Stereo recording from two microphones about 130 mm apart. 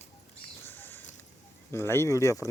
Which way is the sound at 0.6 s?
15° left (ahead or behind).